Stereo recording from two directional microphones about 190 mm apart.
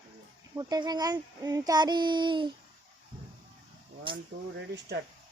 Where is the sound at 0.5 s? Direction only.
20° right (ahead or behind).